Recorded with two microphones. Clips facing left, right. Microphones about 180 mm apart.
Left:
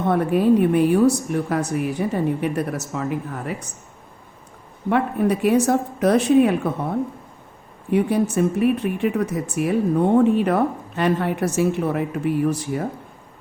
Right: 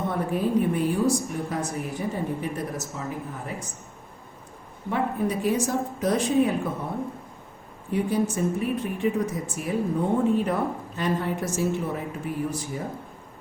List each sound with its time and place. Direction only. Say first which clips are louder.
0.1 s speech: left 10 dB; 70° left (ahead or behind)
4.9 s speech: left 6 dB; 70° left (ahead or behind)
7.9 s speech: left 5 dB; 70° left (ahead or behind)